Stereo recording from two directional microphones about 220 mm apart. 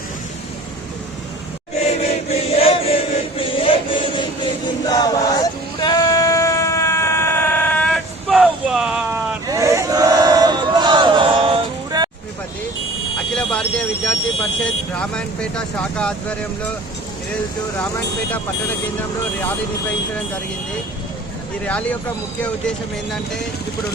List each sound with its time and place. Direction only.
1.8 s chant: 30° left (ahead or behind)
4.9 s male singing: 15° left (ahead or behind); by 9.2 s 5° right (ahead or behind)
9.5 s chant: 15° right (ahead or behind)
13.3 s a sound: 5° left (ahead or behind)
14.6 s vehicle: 5° left (ahead or behind)
21.6 s speech: 5° left (ahead or behind)